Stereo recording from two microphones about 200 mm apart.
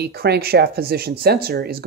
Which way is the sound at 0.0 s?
55° right (ahead or behind).